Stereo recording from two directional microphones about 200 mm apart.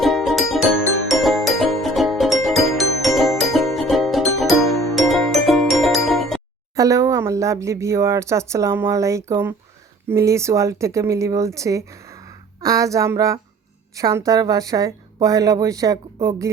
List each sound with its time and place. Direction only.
0.0 s music: centre (ahead or behind)
6.7 s speech: 15° right (ahead or behind)